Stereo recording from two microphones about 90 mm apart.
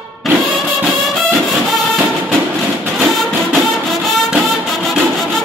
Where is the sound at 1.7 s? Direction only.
Centre (ahead or behind).